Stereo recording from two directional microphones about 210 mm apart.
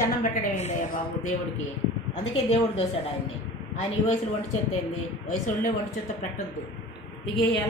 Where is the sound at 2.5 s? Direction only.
30° left (ahead or behind).